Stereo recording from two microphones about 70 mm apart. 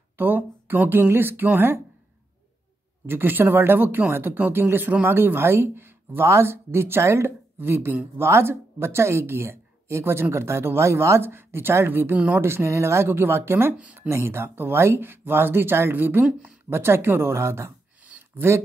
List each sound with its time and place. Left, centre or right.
0.2 s speech: right
3.1 s speech: right
7.5 s speech: right
16.3 s speech: centre
16.7 s speech: right
18.0 s a sound: right